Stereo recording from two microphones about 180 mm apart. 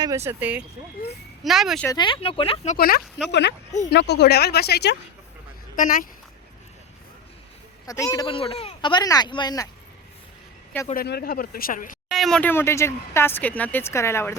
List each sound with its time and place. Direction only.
0.3 s speech: 10° right (ahead or behind)
1.9 s speech: 25° left (ahead or behind)
2.7 s speech: 55° left (ahead or behind)
5.7 s speech: 50° left (ahead or behind)
7.9 s speech: 20° left (ahead or behind)
10.9 s speech: 60° left (ahead or behind)
12.1 s speech: centre (ahead or behind)